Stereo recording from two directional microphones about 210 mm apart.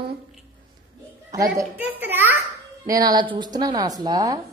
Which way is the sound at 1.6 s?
10° right (ahead or behind).